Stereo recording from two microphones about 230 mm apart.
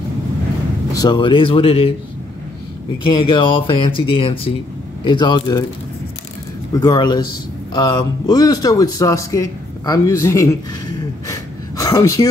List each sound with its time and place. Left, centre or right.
0.9 s speech: centre
3.1 s speech: left
6.7 s speech: centre
11.2 s gasp: centre